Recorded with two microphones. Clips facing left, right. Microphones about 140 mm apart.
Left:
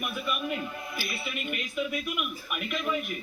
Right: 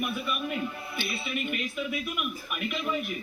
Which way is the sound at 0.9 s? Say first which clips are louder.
Right 2 dB; 25° right (ahead or behind).